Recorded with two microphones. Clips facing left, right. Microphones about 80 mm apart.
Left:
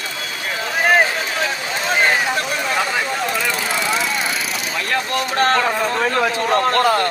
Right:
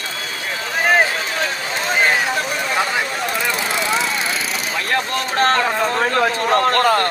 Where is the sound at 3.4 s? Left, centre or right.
Right.